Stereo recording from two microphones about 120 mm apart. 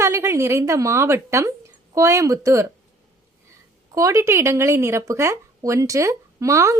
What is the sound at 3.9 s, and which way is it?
Speech, 30° right (ahead or behind).